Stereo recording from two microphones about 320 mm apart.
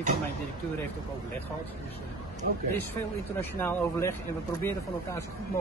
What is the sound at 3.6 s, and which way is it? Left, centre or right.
Speech, centre.